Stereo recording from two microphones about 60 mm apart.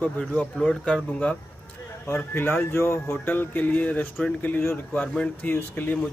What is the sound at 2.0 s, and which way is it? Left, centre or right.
Speech, left.